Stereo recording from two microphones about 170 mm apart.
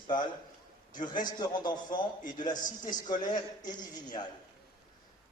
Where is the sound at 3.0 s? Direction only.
25° left (ahead or behind).